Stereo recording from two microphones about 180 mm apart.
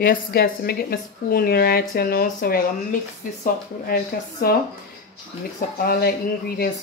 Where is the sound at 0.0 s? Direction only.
55° left (ahead or behind).